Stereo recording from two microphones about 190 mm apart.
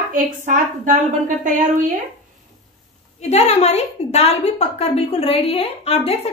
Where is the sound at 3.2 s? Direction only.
35° left (ahead or behind).